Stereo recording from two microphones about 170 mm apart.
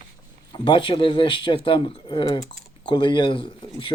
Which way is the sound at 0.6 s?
30° left (ahead or behind).